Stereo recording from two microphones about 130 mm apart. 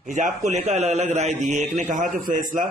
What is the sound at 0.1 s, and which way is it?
A man's voice, 70° right (ahead or behind).